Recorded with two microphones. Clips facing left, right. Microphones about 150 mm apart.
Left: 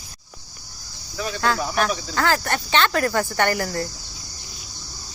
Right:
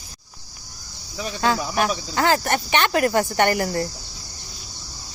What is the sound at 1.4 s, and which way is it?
Speech, 15° right (ahead or behind).